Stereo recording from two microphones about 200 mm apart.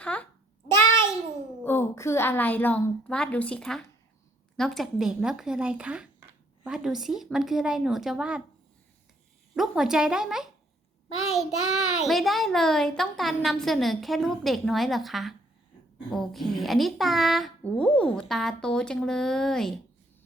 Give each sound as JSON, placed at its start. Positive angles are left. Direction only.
{"t": 0.0, "sound": "a child's voice", "side_deg": 5}
{"t": 1.6, "sound": "a woman's voice", "side_deg": 10}
{"t": 9.6, "sound": "a child's voice", "side_deg": 0}
{"t": 11.5, "sound": "child singing", "side_deg": 90}
{"t": 12.0, "sound": "a child's voice", "side_deg": 0}